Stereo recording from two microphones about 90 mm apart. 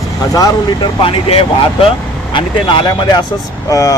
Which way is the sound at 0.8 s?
75° left (ahead or behind).